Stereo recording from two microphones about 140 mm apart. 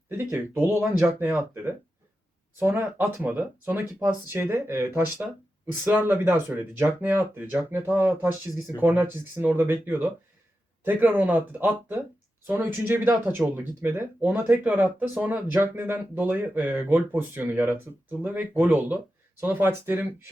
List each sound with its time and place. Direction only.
0.1 s speech: 15° right (ahead or behind)